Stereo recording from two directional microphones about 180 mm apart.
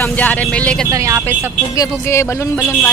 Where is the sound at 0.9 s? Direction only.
15° right (ahead or behind).